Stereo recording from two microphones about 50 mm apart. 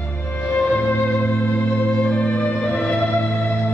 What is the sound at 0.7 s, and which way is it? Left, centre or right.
Music, left.